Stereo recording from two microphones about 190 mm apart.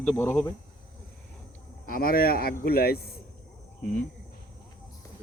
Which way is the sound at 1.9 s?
50° left (ahead or behind).